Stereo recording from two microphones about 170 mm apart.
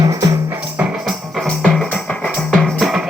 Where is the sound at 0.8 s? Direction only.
Centre (ahead or behind).